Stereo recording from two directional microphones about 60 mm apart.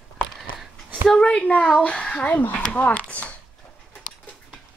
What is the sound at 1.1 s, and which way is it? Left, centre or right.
A woman's voice, centre.